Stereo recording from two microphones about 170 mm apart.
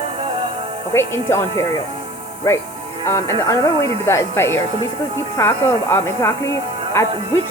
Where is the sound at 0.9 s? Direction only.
15° left (ahead or behind).